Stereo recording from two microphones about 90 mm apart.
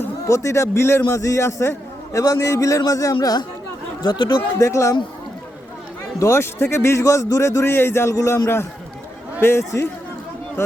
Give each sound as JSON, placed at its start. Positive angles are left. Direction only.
{"t": 0.3, "sound": "a man's voice", "side_deg": 30}
{"t": 4.5, "sound": "a man's voice", "side_deg": 35}
{"t": 6.1, "sound": "a man's voice", "side_deg": 30}
{"t": 9.4, "sound": "a man's voice", "side_deg": 30}